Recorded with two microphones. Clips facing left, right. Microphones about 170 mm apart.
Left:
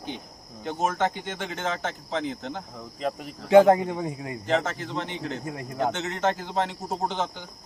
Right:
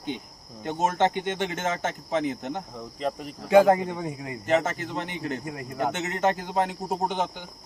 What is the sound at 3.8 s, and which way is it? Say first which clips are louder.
Speech: left 2 dB; 10° left (ahead or behind).